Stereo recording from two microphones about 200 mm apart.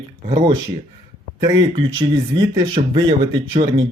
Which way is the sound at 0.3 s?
25° right (ahead or behind).